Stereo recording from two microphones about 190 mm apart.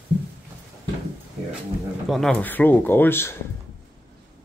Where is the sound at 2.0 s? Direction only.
Centre (ahead or behind).